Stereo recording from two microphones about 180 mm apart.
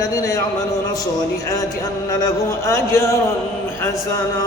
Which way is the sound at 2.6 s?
15° left (ahead or behind).